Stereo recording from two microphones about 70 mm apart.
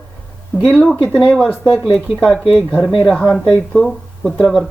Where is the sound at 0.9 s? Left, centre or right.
Left.